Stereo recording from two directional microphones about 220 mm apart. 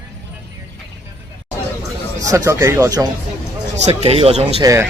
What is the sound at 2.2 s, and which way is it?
Speech, 15° right (ahead or behind).